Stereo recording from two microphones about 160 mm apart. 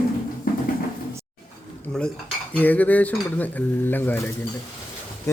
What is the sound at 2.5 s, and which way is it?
Speech, 10° left (ahead or behind).